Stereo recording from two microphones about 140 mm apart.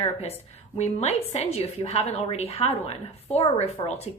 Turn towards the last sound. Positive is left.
turn(degrees=45)  # may be behind; listen again after turning